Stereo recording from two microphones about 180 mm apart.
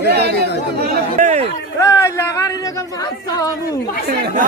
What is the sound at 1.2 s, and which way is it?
Speech, 40° right (ahead or behind).